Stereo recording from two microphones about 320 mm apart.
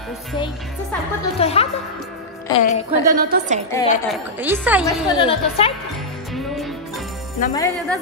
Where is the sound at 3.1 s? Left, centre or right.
Right.